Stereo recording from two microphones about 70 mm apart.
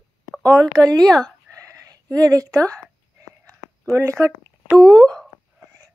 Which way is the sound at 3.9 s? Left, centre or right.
Right.